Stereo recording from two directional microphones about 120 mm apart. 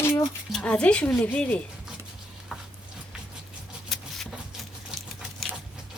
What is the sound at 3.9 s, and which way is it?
Vehicle, centre (ahead or behind).